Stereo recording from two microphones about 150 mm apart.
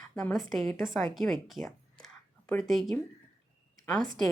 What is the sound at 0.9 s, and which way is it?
A woman's voice, centre (ahead or behind).